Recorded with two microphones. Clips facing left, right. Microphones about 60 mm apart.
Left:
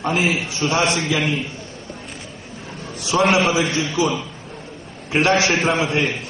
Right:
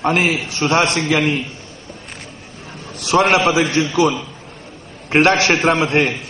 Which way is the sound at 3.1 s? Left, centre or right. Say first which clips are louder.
Right 3 dB; right.